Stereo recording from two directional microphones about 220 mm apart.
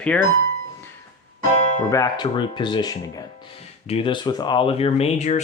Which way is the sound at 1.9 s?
15° left (ahead or behind).